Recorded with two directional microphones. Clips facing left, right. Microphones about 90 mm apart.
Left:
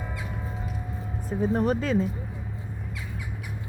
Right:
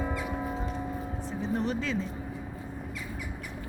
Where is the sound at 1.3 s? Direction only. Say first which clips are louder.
Left 7 dB; 45° left (ahead or behind).